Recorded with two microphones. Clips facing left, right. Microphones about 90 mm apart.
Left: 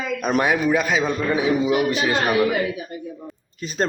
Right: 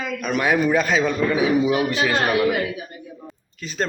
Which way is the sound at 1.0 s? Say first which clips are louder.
Right 1 dB; 20° left (ahead or behind).